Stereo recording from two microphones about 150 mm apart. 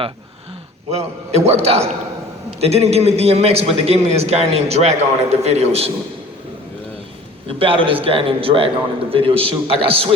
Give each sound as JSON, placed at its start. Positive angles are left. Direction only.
{"t": 0.9, "sound": "a man's voice", "side_deg": -45}
{"t": 7.4, "sound": "a man's voice", "side_deg": -35}